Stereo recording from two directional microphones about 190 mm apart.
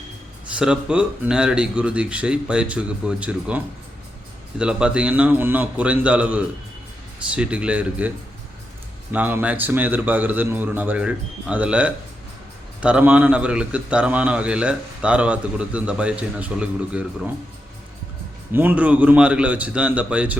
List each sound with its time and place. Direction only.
0.5 s a man's voice: 5° right (ahead or behind)
9.1 s a man's voice: 10° right (ahead or behind)
18.5 s a man's voice: 10° right (ahead or behind)